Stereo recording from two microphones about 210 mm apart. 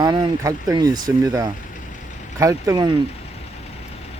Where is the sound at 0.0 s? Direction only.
20° right (ahead or behind).